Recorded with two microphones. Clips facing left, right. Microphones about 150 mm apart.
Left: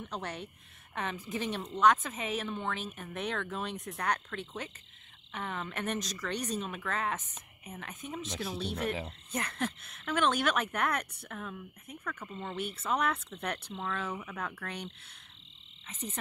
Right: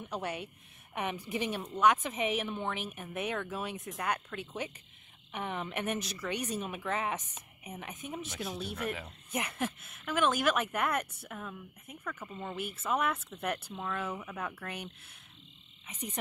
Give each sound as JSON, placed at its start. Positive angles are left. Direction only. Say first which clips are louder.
{"t": 0.0, "sound": "a woman's voice", "louder": "right 2 dB", "side_deg": -10}
{"t": 5.3, "sound": "a woman's voice", "louder": "right 2 dB", "side_deg": -15}
{"t": 8.5, "sound": "speech", "louder": "left 3 dB", "side_deg": 30}
{"t": 9.3, "sound": "a woman's voice", "louder": "right 1 dB", "side_deg": -10}
{"t": 15.9, "sound": "a woman's voice", "louder": "even", "side_deg": -10}